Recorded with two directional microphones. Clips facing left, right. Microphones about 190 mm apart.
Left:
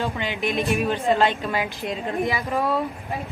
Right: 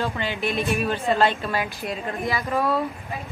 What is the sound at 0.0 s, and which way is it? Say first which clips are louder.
A woman's voice: even; 15° left (ahead or behind).